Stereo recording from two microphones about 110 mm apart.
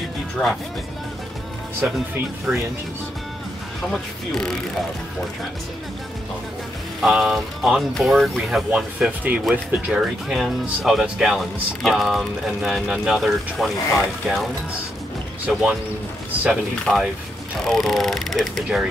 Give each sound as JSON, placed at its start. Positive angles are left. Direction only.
{"t": 0.4, "sound": "speech", "side_deg": 10}
{"t": 2.1, "sound": "speech", "side_deg": -25}
{"t": 3.9, "sound": "speech", "side_deg": 5}
{"t": 7.0, "sound": "speech", "side_deg": -5}
{"t": 16.9, "sound": "speech", "side_deg": 5}